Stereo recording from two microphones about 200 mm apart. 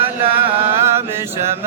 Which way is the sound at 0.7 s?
10° right (ahead or behind).